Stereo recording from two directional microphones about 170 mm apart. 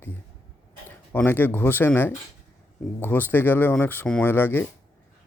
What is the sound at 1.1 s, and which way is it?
Speech, 10° left (ahead or behind).